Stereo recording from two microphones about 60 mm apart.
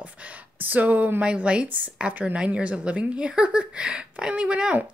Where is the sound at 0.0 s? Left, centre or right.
Right.